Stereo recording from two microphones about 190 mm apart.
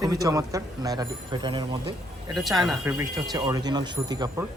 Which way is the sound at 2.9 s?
15° right (ahead or behind).